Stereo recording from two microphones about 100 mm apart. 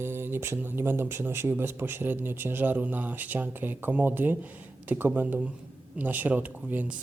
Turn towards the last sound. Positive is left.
turn(degrees=-15)  # may be behind; listen again after turning